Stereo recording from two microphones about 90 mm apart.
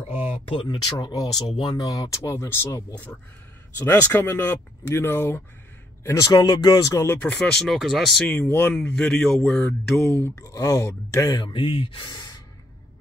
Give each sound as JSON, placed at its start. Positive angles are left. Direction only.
{"t": 0.2, "sound": "a sound", "side_deg": 85}
{"t": 0.9, "sound": "speech", "side_deg": 50}
{"t": 6.0, "sound": "speech", "side_deg": 40}
{"t": 7.1, "sound": "speech", "side_deg": 20}
{"t": 7.5, "sound": "speech", "side_deg": 0}
{"t": 8.5, "sound": "speech", "side_deg": 25}
{"t": 8.7, "sound": "speech", "side_deg": 10}
{"t": 9.4, "sound": "speech", "side_deg": 20}
{"t": 10.3, "sound": "speech", "side_deg": 40}
{"t": 11.3, "sound": "speech", "side_deg": 65}
{"t": 12.1, "sound": "gasp", "side_deg": 50}